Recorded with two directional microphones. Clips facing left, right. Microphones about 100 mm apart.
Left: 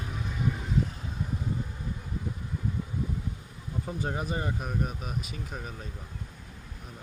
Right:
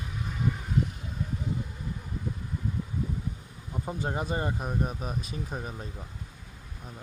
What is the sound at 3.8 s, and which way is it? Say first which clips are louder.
Speech: right 1 dB; 25° right (ahead or behind).